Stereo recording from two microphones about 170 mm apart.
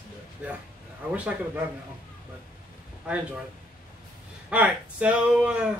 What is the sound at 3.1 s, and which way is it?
Speech, 5° right (ahead or behind).